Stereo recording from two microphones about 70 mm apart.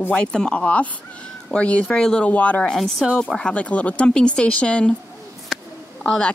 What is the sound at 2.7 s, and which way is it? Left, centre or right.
Speech, centre.